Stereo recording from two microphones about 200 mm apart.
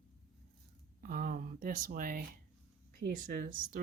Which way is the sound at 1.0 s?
45° right (ahead or behind).